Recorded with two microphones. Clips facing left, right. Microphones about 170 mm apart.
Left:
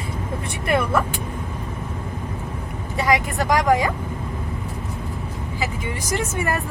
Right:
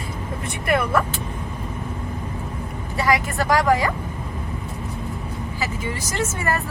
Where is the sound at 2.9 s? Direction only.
20° left (ahead or behind).